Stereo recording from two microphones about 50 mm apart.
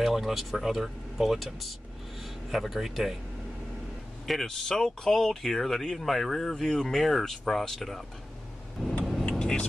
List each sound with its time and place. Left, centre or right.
0.0 s speech: centre
4.3 s speech: centre
8.8 s vehicle: centre